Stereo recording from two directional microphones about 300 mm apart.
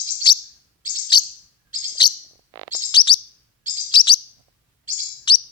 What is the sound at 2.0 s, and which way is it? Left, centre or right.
Chirp, centre.